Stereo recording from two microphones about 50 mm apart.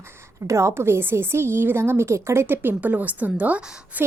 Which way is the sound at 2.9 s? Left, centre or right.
Right.